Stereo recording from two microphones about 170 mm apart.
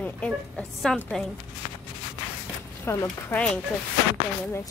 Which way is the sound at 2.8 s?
15° left (ahead or behind).